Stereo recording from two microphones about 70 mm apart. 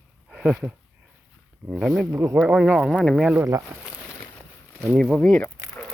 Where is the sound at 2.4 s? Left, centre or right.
Centre.